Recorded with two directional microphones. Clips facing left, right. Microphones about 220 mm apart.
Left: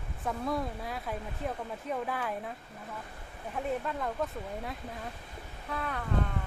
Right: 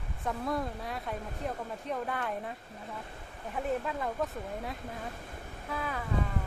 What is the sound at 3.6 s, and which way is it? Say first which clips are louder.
Speech: right 1 dB; centre (ahead or behind).